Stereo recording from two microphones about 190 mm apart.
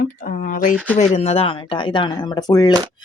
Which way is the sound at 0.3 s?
45° left (ahead or behind).